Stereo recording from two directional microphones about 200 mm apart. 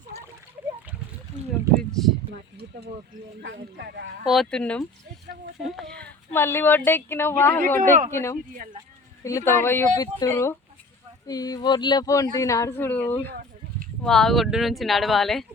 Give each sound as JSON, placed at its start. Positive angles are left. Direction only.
{"t": 1.7, "sound": "a sound", "side_deg": 0}
{"t": 3.4, "sound": "speech", "side_deg": -60}
{"t": 4.3, "sound": "speech", "side_deg": 0}
{"t": 7.8, "sound": "speech", "side_deg": -40}
{"t": 8.1, "sound": "speech", "side_deg": 15}